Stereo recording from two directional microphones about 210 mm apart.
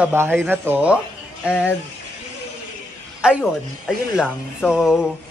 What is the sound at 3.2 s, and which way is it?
Speech, 5° right (ahead or behind).